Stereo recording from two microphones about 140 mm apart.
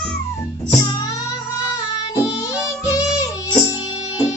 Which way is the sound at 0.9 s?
25° left (ahead or behind).